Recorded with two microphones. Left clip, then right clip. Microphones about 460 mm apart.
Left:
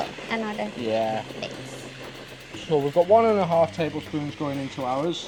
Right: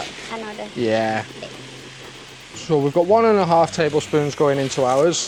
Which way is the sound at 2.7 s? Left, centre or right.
Right.